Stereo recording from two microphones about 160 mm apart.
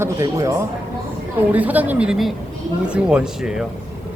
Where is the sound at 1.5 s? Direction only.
10° right (ahead or behind).